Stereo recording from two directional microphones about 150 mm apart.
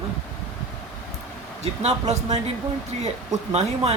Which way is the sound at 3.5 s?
45° right (ahead or behind).